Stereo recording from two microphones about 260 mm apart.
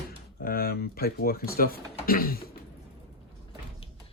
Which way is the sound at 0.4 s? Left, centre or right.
Left.